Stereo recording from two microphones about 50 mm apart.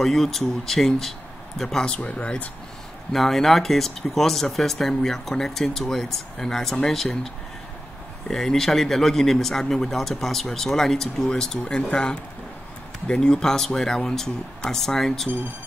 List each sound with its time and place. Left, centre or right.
0.0 s a man's voice: centre
2.0 s speech: left
3.1 s speech: centre
8.3 s a man's voice: centre